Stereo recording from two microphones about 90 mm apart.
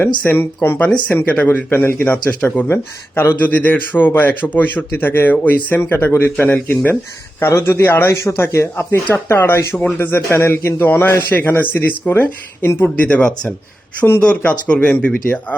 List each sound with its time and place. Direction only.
0.3 s speech: 25° left (ahead or behind)
0.9 s speech: 10° left (ahead or behind)